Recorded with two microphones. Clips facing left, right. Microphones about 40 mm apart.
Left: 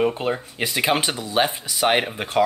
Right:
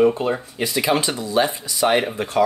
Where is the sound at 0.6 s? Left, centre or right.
Left.